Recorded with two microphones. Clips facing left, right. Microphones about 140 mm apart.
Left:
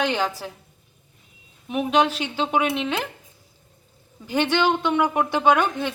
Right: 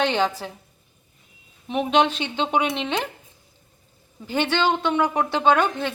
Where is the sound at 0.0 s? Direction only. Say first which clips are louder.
Right 2 dB; 10° left (ahead or behind).